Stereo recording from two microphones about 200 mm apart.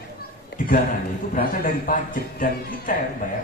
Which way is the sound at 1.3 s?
40° left (ahead or behind).